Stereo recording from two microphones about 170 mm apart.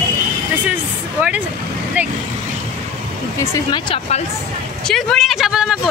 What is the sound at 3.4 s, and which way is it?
Speech, 20° left (ahead or behind).